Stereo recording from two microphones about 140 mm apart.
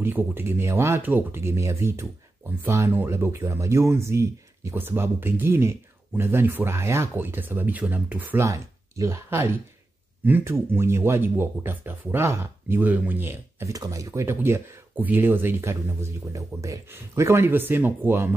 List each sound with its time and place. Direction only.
0.0 s speech: 15° right (ahead or behind)